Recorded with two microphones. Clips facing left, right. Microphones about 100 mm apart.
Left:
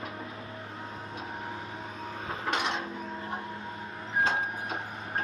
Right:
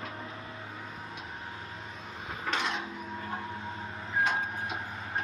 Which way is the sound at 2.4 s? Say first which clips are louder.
Left 1 dB; 20° left (ahead or behind).